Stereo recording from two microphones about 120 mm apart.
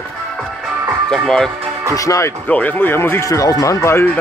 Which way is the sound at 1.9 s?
30° left (ahead or behind).